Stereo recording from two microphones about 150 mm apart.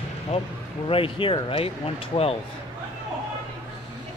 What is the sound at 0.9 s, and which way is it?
Speech, 35° left (ahead or behind).